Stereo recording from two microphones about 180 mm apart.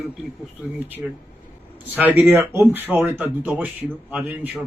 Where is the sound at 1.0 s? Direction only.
5° right (ahead or behind).